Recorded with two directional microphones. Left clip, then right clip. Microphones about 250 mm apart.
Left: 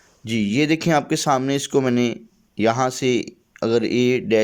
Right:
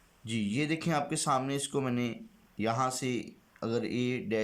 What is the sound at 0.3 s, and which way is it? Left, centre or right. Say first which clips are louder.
Speech: left 13 dB; left.